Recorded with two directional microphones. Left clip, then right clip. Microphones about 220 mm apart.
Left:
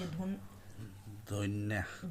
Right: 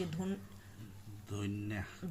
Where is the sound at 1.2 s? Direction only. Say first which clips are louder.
Left 4 dB; 45° left (ahead or behind).